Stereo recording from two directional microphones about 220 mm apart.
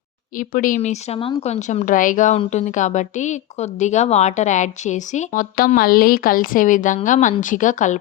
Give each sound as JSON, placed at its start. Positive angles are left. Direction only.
{"t": 0.3, "sound": "speech", "side_deg": 40}